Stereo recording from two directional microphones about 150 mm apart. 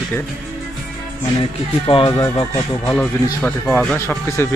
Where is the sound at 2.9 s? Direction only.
10° left (ahead or behind).